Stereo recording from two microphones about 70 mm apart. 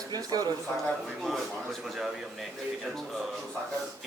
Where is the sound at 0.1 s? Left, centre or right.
Right.